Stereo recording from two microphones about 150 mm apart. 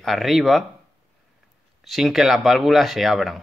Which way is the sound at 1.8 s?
Centre (ahead or behind).